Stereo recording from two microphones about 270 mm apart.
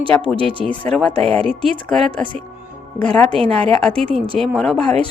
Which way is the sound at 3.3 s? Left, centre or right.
Right.